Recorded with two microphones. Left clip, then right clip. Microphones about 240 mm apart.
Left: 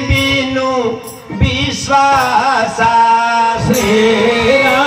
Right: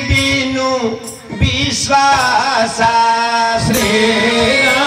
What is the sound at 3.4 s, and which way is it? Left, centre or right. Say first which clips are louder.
Music: left 1 dB; left.